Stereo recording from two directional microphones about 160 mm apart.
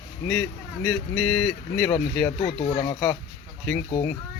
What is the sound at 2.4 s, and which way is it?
Speech, 35° left (ahead or behind).